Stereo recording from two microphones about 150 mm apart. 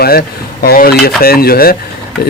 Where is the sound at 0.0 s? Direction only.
90° left.